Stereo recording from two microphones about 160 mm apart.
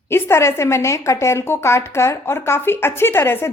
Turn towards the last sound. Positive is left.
turn(degrees=15)  # may be behind; listen again after turning